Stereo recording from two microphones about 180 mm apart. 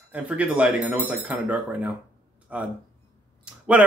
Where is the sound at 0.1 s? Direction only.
10° right (ahead or behind).